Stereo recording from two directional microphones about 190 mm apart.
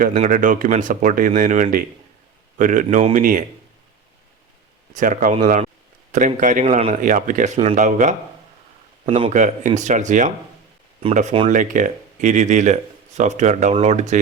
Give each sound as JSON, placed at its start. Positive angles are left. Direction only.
{"t": 0.1, "sound": "speech", "side_deg": -40}
{"t": 4.9, "sound": "speech", "side_deg": -45}
{"t": 9.0, "sound": "a man's voice", "side_deg": -25}
{"t": 9.3, "sound": "speech", "side_deg": -40}